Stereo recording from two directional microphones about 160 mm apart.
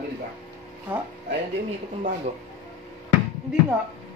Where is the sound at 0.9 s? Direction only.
10° right (ahead or behind).